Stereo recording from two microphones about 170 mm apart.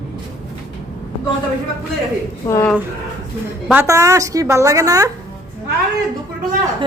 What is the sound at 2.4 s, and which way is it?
Speech, 15° left (ahead or behind).